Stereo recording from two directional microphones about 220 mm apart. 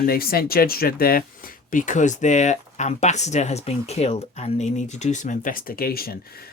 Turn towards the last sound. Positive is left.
turn(degrees=45)  # may be behind; listen again after turning